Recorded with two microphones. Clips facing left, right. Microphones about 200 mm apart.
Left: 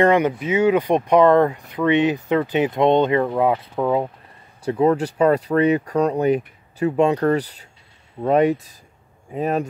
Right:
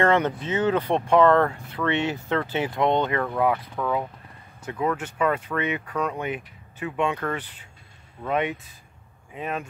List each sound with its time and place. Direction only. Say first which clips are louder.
0.0 s speech: left 5 dB; 15° left (ahead or behind); by 9.7 s 40° left (ahead or behind)